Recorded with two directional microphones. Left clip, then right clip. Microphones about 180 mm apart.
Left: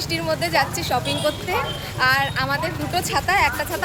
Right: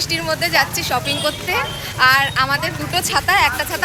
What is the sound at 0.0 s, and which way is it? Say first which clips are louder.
A woman's voice: right 4 dB; 5° right (ahead or behind).